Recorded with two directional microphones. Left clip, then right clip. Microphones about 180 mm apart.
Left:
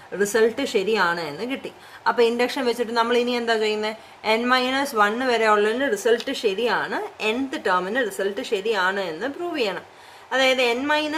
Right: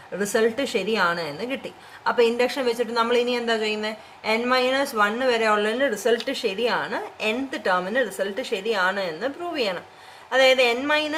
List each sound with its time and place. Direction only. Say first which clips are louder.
0.2 s a woman's voice: left 2 dB; 25° left (ahead or behind)